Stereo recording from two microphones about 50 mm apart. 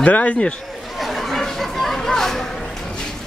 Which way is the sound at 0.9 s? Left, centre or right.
Centre.